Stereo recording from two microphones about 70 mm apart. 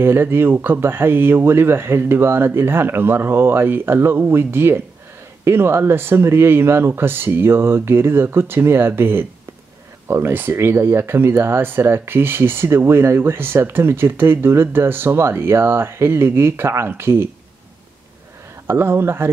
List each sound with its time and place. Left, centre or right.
0.0 s speech: right
18.7 s speech: right